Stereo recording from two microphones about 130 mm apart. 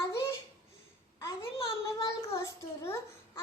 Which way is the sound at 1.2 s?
25° left (ahead or behind).